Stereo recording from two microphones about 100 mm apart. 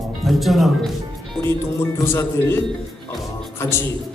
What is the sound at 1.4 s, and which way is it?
Speech, 25° left (ahead or behind).